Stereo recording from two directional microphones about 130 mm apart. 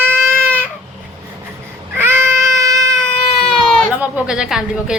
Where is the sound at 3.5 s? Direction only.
Centre (ahead or behind).